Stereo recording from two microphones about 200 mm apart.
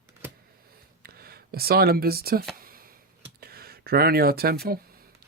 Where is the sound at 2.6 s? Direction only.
45° right (ahead or behind).